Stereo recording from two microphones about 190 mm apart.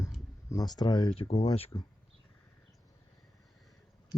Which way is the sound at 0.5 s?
20° left (ahead or behind).